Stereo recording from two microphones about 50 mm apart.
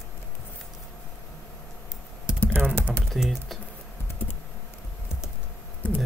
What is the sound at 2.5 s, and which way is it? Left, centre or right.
Typing, right.